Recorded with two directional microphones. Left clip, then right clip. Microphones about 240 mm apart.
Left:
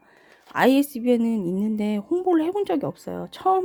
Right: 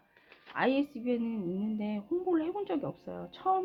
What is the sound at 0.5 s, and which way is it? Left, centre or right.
Speech, left.